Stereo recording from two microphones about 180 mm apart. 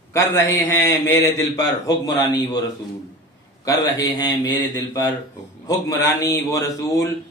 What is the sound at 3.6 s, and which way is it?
A man's voice, 20° left (ahead or behind).